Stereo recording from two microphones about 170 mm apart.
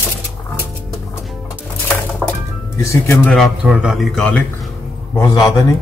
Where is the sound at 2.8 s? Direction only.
15° left (ahead or behind).